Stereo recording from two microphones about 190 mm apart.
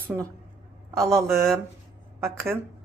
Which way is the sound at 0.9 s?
15° right (ahead or behind).